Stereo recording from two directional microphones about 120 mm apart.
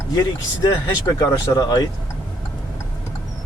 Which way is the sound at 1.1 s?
30° left (ahead or behind).